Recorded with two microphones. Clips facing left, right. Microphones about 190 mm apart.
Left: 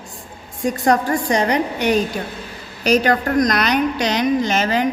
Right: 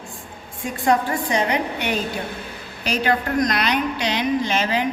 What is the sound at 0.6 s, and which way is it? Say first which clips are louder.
A woman's voice: left 3 dB; 40° left (ahead or behind).